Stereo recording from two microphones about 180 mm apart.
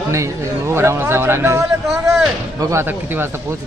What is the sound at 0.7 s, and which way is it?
Speech, 15° right (ahead or behind).